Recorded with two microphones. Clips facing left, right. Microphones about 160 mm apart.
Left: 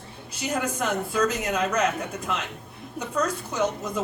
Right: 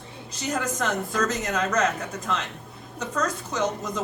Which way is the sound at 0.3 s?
10° left (ahead or behind).